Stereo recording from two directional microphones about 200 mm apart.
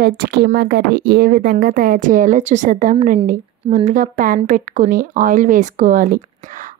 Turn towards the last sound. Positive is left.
turn(degrees=-40)  # may be behind; listen again after turning